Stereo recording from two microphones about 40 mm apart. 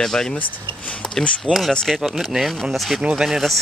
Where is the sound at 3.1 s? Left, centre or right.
Centre.